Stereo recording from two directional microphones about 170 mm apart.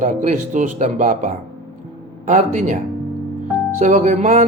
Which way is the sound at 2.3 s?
45° right (ahead or behind).